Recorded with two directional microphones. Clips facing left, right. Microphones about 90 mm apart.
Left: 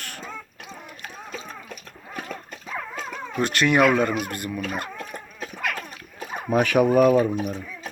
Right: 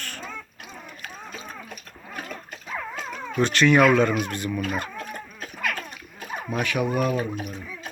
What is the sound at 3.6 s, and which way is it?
Speech, 15° left (ahead or behind).